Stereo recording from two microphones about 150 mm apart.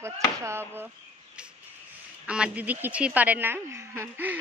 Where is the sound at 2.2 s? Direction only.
5° right (ahead or behind).